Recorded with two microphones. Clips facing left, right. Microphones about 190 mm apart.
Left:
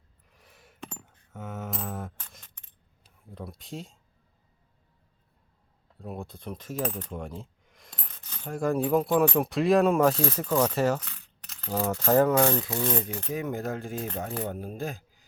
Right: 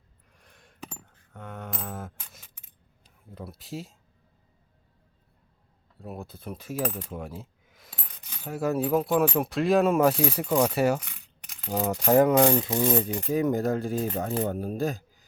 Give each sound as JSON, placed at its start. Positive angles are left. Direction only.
{"t": 0.3, "sound": "a sound", "side_deg": 5}
{"t": 3.2, "sound": "speech", "side_deg": 0}
{"t": 6.0, "sound": "coin", "side_deg": 0}
{"t": 13.1, "sound": "speech", "side_deg": -15}
{"t": 13.3, "sound": "a man's voice", "side_deg": -35}